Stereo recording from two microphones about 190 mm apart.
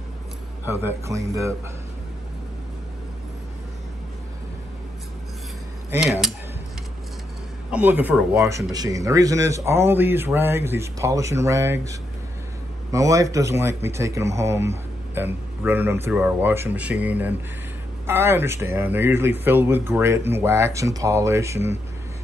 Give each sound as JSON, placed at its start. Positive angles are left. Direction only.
{"t": 0.7, "sound": "speech", "side_deg": -15}
{"t": 5.9, "sound": "cutlery", "side_deg": -10}
{"t": 7.7, "sound": "speech", "side_deg": -10}
{"t": 8.5, "sound": "speech", "side_deg": -15}